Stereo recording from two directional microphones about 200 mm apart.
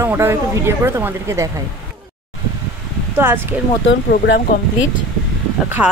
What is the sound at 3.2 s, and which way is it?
Speech, 10° right (ahead or behind).